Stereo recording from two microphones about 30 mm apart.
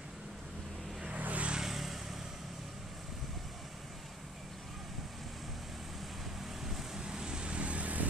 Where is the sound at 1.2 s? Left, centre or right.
Right.